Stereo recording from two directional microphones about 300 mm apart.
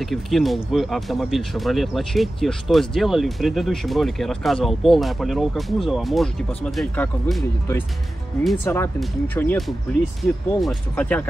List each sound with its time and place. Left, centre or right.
0.0 s speech: centre